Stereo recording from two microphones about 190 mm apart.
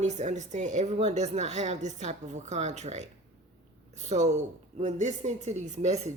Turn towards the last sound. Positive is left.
turn(degrees=-35)  # may be behind; listen again after turning